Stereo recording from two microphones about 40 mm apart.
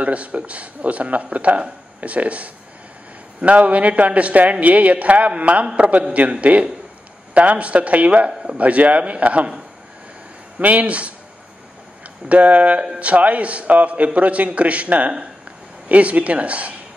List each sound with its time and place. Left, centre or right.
0.0 s speech: right
8.3 s speech: centre
8.5 s speech: right
10.6 s speech: right
12.3 s speech: right